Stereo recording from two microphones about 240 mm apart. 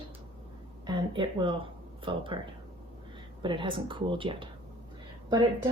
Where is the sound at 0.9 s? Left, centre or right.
Centre.